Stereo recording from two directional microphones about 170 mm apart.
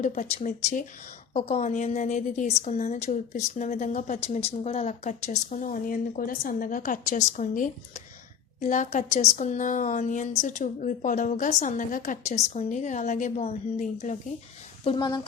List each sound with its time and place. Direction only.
0.0 s a woman's voice: 45° left (ahead or behind)
14.8 s speech: 25° left (ahead or behind)